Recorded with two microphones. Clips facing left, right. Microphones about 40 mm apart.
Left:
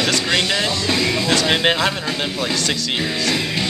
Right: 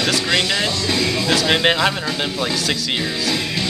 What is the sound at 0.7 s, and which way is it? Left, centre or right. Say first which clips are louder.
Music: left 1 dB; left.